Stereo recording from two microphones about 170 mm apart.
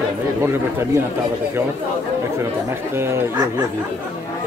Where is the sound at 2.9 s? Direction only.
15° right (ahead or behind).